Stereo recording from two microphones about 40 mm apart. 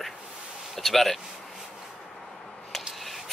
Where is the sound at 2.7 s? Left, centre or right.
Centre.